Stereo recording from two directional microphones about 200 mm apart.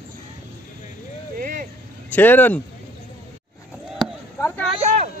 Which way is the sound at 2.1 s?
10° left (ahead or behind).